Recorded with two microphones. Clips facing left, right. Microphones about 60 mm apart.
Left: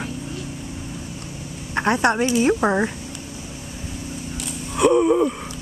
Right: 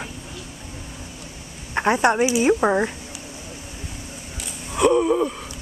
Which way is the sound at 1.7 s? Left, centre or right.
Centre.